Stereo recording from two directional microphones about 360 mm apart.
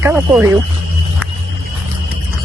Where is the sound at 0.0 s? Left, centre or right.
Centre.